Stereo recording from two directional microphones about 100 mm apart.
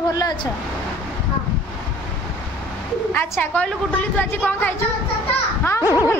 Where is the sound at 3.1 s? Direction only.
20° left (ahead or behind).